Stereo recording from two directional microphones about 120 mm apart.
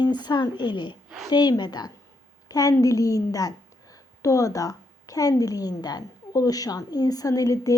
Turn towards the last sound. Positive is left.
turn(degrees=30)  # may be behind; listen again after turning